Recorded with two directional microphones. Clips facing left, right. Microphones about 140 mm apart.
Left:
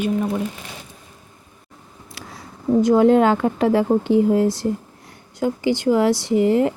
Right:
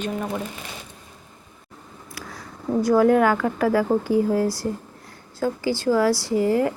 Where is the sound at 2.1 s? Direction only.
25° left (ahead or behind).